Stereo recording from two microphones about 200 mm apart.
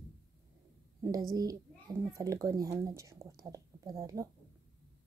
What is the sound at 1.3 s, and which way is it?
A child's voice, 20° right (ahead or behind).